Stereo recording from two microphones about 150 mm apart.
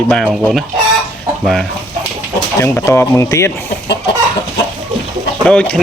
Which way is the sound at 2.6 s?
15° left (ahead or behind).